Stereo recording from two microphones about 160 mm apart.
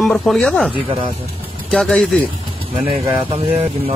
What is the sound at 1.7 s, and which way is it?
Speech, 5° left (ahead or behind).